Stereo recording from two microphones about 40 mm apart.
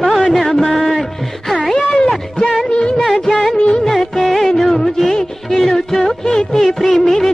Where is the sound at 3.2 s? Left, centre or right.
Centre.